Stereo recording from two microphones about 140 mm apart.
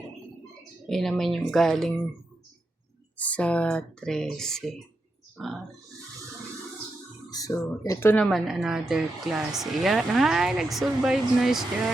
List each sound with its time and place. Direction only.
0.9 s speech: 5° left (ahead or behind)
3.2 s speech: 10° left (ahead or behind)
7.3 s speech: 25° left (ahead or behind)
8.2 s speech: centre (ahead or behind)